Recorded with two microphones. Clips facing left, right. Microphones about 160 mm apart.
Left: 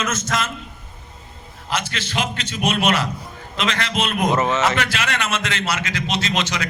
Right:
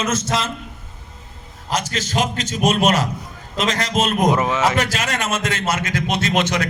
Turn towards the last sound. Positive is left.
turn(degrees=-55)  # may be behind; listen again after turning